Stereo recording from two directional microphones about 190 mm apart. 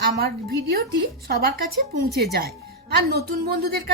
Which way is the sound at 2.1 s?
55° right (ahead or behind).